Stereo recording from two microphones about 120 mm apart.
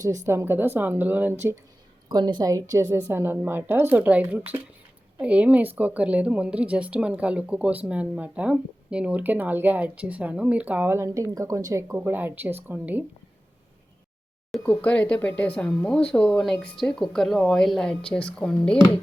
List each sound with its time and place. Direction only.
0.3 s a woman's voice: 20° right (ahead or behind)
2.0 s a woman's voice: 35° right (ahead or behind); by 13.1 s 15° right (ahead or behind)
14.6 s speech: 10° left (ahead or behind)